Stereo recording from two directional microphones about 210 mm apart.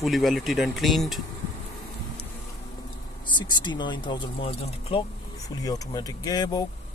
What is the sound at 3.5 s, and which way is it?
Speech, 20° left (ahead or behind).